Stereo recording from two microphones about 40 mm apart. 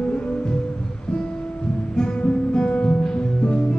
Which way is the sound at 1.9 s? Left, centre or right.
Left.